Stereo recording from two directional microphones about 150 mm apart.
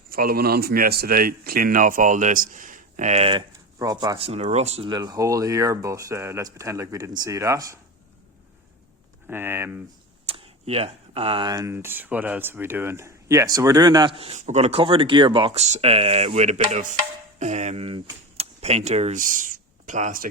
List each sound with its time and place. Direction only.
0.1 s speech: 80° right; by 3.4 s 40° right (ahead or behind)
3.8 s speech: 25° right (ahead or behind)
4.2 s a sound: 45° right (ahead or behind)
4.9 s speech: 25° right (ahead or behind)
9.2 s speech: 15° right (ahead or behind)
10.2 s speech: 40° right (ahead or behind)
14.2 s speech: 45° right (ahead or behind)
15.6 s a sound: 45° right (ahead or behind)
17.4 s speech: 50° right (ahead or behind)